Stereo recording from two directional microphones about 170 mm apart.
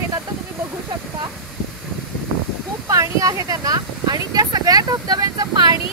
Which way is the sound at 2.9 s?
20° right (ahead or behind).